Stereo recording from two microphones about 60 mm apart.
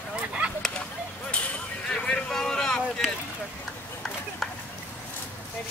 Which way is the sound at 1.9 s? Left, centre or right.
Centre.